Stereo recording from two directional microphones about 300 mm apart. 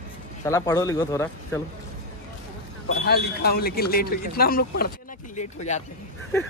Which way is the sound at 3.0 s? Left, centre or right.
Left.